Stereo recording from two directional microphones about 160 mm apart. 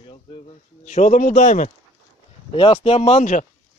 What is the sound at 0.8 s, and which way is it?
Speech, 50° left (ahead or behind).